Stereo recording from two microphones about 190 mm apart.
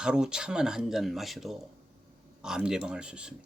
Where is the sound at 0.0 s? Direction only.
5° right (ahead or behind).